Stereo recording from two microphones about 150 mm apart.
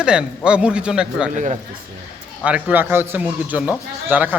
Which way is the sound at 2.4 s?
10° right (ahead or behind).